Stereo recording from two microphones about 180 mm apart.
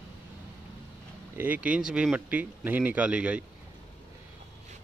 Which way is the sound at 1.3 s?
10° right (ahead or behind).